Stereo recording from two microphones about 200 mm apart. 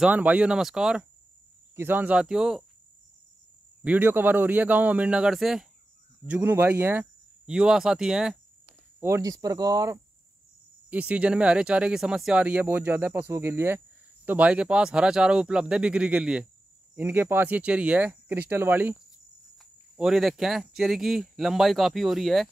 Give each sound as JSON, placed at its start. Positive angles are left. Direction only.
{"t": 0.0, "sound": "speech", "side_deg": -10}
{"t": 3.8, "sound": "speech", "side_deg": -10}
{"t": 9.0, "sound": "speech", "side_deg": -15}
{"t": 10.9, "sound": "speech", "side_deg": -5}